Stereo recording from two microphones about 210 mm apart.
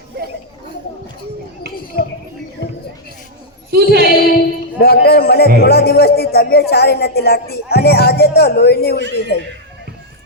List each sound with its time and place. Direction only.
3.7 s a woman's voice: 50° right (ahead or behind)
4.0 s a sound: 45° left (ahead or behind)
5.5 s speech: 50° left (ahead or behind)